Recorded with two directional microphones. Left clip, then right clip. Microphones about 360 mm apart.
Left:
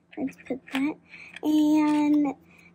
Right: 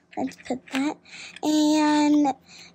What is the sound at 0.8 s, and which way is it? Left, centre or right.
Speech, right.